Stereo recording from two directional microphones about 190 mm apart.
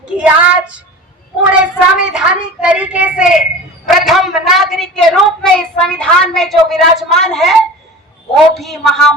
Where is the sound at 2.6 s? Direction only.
5° right (ahead or behind).